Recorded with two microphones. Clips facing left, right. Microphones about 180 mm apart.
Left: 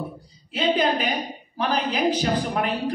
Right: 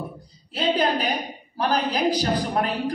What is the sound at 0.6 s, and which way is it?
A woman's voice, 35° right (ahead or behind).